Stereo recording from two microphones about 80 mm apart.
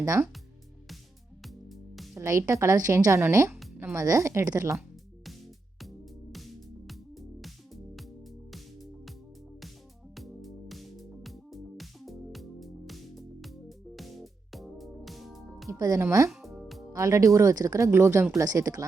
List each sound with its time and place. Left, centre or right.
0.0 s speech: right
1.4 s music: centre
2.1 s speech: right
3.9 s speech: right
6.3 s music: centre
8.5 s music: centre
10.2 s music: centre
16.0 s speech: right
16.3 s music: centre
16.9 s speech: right
18.3 s speech: right